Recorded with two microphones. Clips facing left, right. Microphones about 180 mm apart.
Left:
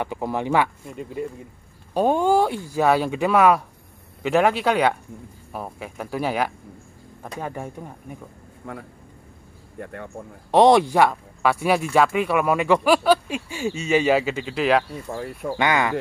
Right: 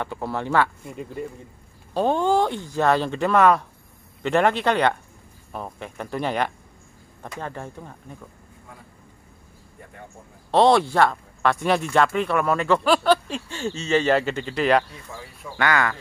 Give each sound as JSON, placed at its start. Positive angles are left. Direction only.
{"t": 0.0, "sound": "speech", "side_deg": 15}
{"t": 0.8, "sound": "speech", "side_deg": 0}
{"t": 2.0, "sound": "speech", "side_deg": 10}
{"t": 8.6, "sound": "a man's voice", "side_deg": 65}
{"t": 10.5, "sound": "speech", "side_deg": 15}
{"t": 15.0, "sound": "speech", "side_deg": 55}
{"t": 15.5, "sound": "speech", "side_deg": 20}